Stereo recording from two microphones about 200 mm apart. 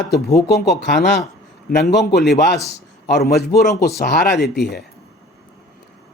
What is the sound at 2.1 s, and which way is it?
Speech, centre (ahead or behind).